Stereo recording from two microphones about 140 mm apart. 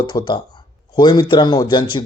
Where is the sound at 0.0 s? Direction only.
30° left (ahead or behind).